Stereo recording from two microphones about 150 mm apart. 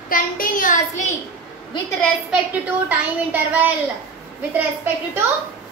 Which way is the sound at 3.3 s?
10° right (ahead or behind).